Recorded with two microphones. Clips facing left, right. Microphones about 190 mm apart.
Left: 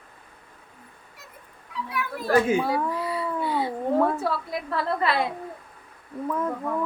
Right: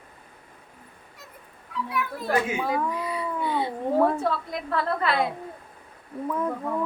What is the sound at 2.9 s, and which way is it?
Speech, 15° right (ahead or behind).